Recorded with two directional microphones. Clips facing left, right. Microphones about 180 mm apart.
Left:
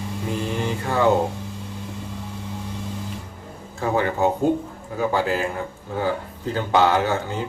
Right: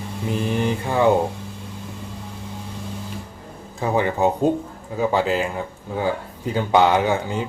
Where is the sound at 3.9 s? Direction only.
20° right (ahead or behind).